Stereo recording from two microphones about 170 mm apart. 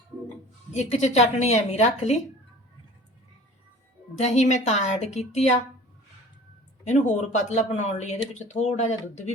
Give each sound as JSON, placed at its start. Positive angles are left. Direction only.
{"t": 0.7, "sound": "speech", "side_deg": 40}
{"t": 4.2, "sound": "speech", "side_deg": 40}
{"t": 6.8, "sound": "speech", "side_deg": 45}